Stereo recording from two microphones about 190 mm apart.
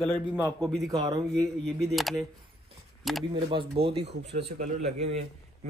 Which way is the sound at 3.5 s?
30° right (ahead or behind).